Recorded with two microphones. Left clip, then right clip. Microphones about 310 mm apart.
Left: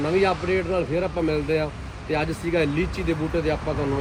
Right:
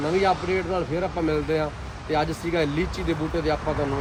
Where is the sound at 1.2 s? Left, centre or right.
Centre.